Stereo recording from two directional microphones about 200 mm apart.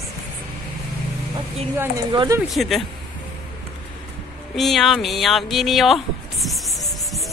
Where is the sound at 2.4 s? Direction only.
Centre (ahead or behind).